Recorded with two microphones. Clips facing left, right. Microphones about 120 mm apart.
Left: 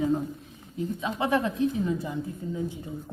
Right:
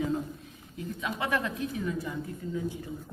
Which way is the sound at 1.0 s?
25° left (ahead or behind).